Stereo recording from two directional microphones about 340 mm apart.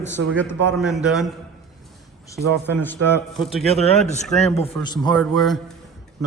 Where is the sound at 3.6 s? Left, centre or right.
Centre.